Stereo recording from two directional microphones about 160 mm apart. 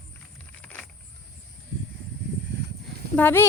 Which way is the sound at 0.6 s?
5° left (ahead or behind).